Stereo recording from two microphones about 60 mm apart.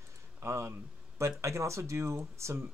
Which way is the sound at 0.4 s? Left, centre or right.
Right.